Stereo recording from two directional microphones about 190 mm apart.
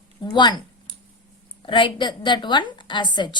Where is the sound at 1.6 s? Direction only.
25° left (ahead or behind).